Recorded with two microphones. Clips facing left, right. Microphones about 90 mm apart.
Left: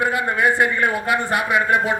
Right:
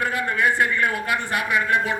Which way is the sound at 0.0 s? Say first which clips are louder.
Left 3 dB; 20° left (ahead or behind).